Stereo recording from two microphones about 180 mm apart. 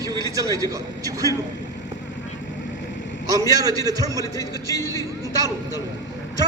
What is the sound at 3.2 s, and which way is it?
Speech, 20° right (ahead or behind).